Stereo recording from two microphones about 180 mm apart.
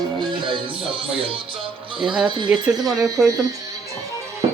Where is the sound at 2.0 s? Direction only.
5° right (ahead or behind).